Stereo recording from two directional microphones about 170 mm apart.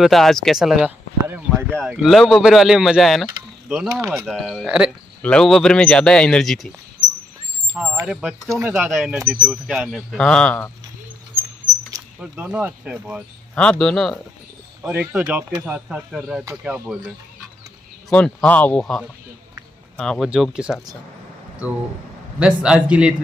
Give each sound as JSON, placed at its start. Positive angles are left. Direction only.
{"t": 0.0, "sound": "speech", "side_deg": 0}
{"t": 1.9, "sound": "speech", "side_deg": 0}
{"t": 7.7, "sound": "a sound", "side_deg": -5}
{"t": 8.1, "sound": "speech", "side_deg": -5}
{"t": 11.6, "sound": "a sound", "side_deg": -50}
{"t": 12.2, "sound": "speech", "side_deg": -10}
{"t": 13.6, "sound": "speech", "side_deg": 5}
{"t": 14.8, "sound": "speech", "side_deg": -10}
{"t": 18.1, "sound": "speech", "side_deg": 5}
{"t": 22.4, "sound": "speech", "side_deg": -5}